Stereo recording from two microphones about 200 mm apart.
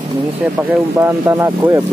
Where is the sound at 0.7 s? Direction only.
10° right (ahead or behind).